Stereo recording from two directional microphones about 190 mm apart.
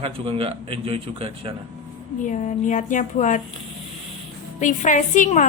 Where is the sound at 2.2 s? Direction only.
40° left (ahead or behind).